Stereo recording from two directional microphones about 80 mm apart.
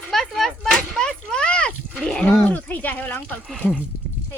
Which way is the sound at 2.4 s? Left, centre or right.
Left.